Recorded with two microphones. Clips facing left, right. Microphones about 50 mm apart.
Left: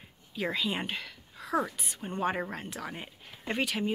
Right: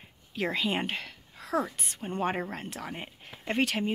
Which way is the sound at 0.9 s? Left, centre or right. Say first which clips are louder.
Right 2 dB; right.